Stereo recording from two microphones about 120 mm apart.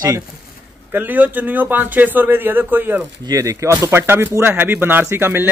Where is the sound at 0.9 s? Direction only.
15° right (ahead or behind).